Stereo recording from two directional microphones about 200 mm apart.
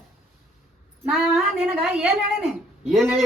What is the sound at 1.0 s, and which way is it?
Speech, centre (ahead or behind).